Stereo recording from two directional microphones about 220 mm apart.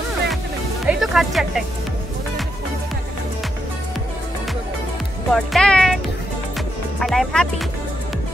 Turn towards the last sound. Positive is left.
turn(degrees=0)  # may be behind; listen again after turning